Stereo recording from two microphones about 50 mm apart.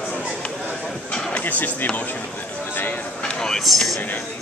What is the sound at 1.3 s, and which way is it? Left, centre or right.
Speech, left.